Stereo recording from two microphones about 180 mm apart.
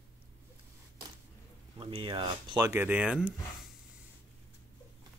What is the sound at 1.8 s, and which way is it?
Speech, 30° right (ahead or behind).